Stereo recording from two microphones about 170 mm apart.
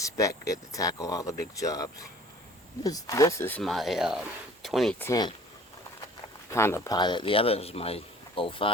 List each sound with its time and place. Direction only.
0.0 s speech: 20° left (ahead or behind)
3.6 s speech: centre (ahead or behind)
4.9 s speech: 15° left (ahead or behind)
6.5 s speech: 15° left (ahead or behind); by 8.7 s 30° left (ahead or behind)